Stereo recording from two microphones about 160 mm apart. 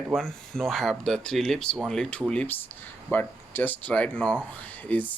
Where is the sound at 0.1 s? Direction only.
5° left (ahead or behind).